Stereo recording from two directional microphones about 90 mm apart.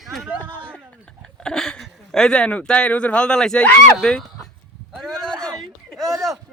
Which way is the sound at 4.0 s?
10° left (ahead or behind).